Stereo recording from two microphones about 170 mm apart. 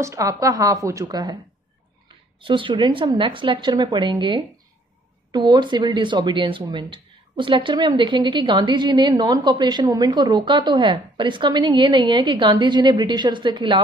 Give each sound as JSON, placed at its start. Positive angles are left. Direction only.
{"t": 0.0, "sound": "speech", "side_deg": -20}
{"t": 2.4, "sound": "speech", "side_deg": -30}